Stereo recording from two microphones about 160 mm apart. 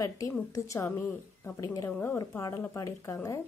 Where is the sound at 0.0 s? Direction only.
20° left (ahead or behind).